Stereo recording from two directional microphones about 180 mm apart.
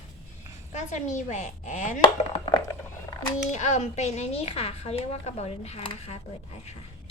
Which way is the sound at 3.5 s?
40° left (ahead or behind).